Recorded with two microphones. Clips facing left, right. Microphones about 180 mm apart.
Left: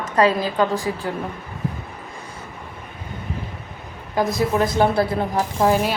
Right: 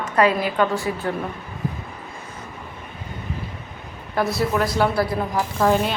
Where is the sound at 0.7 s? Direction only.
15° left (ahead or behind).